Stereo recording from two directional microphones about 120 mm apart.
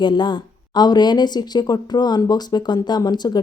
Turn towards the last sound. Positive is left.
turn(degrees=35)  # may be behind; listen again after turning